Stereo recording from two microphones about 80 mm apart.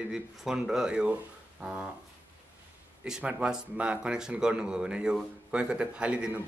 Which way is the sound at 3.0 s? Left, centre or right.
Centre.